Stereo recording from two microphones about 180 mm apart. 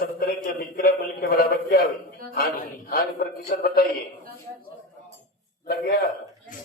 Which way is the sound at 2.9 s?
55° left (ahead or behind).